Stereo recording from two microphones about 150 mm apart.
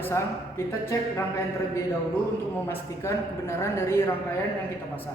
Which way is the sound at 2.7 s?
20° left (ahead or behind).